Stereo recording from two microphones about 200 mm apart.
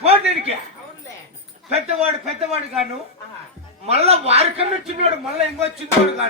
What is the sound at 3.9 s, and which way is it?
Speech, 30° right (ahead or behind).